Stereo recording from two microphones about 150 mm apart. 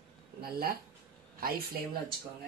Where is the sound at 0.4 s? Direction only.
90° right.